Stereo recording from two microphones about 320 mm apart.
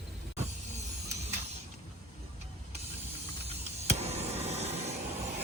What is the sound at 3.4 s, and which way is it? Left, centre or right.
Vehicle, centre.